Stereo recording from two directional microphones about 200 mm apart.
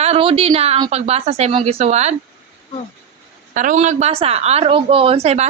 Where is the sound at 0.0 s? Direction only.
30° right (ahead or behind).